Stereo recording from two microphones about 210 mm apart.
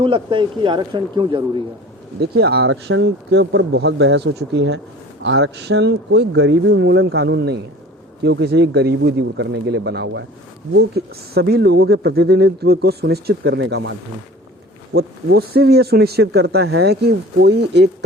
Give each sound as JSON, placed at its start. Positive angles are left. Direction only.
{"t": 0.0, "sound": "speech", "side_deg": -25}
{"t": 2.2, "sound": "speech", "side_deg": -50}
{"t": 14.9, "sound": "speech", "side_deg": -50}